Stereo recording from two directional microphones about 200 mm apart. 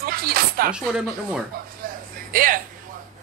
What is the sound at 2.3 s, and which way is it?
Speech, 45° right (ahead or behind).